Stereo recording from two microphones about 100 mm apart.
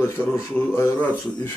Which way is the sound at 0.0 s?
25° left (ahead or behind).